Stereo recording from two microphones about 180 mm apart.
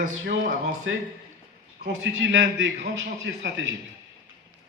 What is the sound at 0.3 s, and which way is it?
Speech, 65° right (ahead or behind).